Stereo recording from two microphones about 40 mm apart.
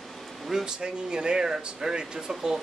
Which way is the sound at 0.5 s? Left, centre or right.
Centre.